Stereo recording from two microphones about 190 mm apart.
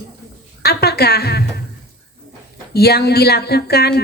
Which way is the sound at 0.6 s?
55° left (ahead or behind).